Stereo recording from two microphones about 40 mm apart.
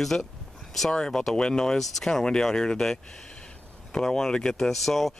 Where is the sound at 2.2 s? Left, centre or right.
Centre.